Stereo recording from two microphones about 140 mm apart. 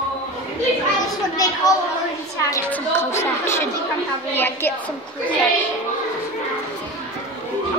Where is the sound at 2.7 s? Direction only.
15° left (ahead or behind).